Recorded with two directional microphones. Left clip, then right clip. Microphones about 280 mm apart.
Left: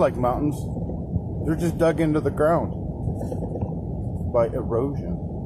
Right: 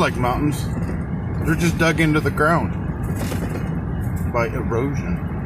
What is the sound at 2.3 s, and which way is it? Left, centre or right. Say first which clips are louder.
Speech: right 1 dB; centre.